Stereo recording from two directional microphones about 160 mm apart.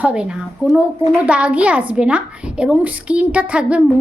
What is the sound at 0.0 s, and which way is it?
A woman's voice, 5° right (ahead or behind).